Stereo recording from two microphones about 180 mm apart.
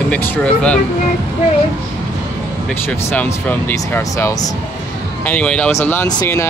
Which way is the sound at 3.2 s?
10° left (ahead or behind).